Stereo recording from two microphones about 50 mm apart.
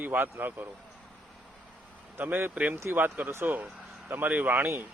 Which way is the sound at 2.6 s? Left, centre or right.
Right.